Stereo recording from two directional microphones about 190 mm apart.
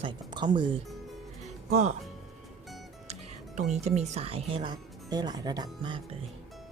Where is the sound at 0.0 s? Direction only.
25° right (ahead or behind).